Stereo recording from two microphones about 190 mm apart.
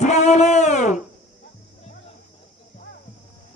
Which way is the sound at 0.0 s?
35° left (ahead or behind).